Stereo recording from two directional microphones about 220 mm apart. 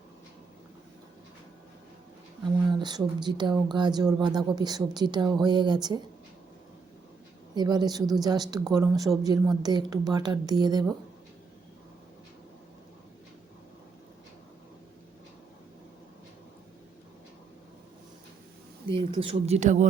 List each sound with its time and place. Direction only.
2.6 s a woman's voice: 20° right (ahead or behind)
7.5 s a woman's voice: 20° right (ahead or behind)
18.9 s a woman's voice: 25° right (ahead or behind)